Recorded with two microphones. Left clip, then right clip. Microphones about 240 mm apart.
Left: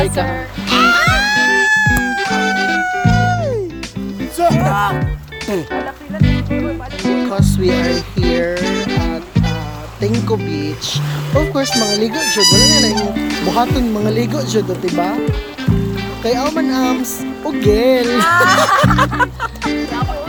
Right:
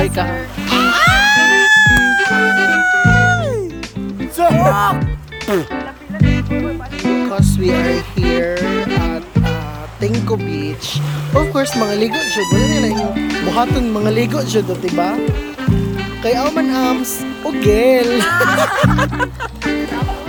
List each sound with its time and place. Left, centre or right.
0.0 s music: centre
4.6 s music: right
6.2 s music: centre
10.0 s speech: centre